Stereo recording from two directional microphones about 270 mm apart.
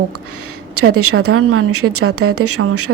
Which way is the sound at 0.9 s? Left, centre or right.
Right.